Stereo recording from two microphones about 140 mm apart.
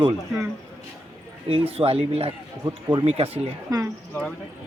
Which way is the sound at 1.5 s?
45° right (ahead or behind).